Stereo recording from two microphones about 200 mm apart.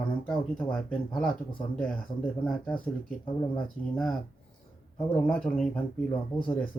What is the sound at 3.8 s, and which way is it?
Speech, 40° left (ahead or behind).